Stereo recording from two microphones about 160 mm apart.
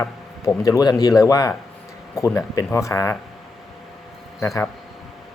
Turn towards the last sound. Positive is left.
turn(degrees=20)  # may be behind; listen again after turning